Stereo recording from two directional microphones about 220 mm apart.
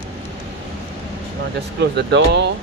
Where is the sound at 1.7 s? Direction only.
50° right (ahead or behind).